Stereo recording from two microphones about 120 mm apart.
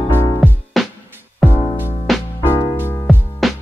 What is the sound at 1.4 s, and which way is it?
Music, 20° left (ahead or behind).